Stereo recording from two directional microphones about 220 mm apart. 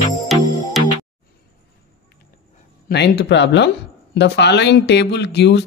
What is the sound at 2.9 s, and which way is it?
Speech, 50° left (ahead or behind).